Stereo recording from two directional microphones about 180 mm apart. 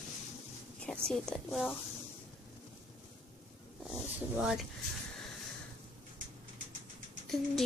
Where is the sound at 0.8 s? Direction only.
5° left (ahead or behind).